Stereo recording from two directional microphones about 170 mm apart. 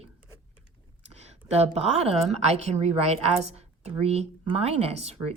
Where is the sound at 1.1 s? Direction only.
40° right (ahead or behind).